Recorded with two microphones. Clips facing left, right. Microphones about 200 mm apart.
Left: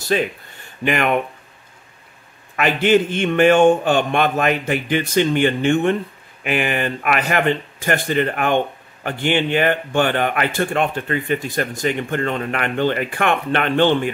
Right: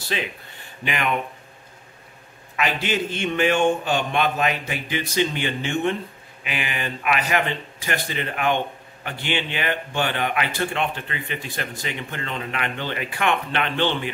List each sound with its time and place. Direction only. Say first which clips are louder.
0.1 s speech: left 9 dB; 45° left (ahead or behind)
2.5 s speech: left 9 dB; 55° left (ahead or behind)